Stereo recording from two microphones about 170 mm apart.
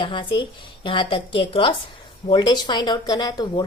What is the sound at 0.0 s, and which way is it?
Speech, 30° left (ahead or behind).